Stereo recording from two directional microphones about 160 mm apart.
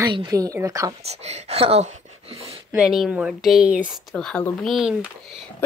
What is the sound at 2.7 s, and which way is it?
Speech, 5° right (ahead or behind).